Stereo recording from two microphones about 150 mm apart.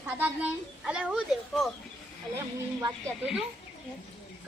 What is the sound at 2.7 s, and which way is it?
Speech, 15° right (ahead or behind).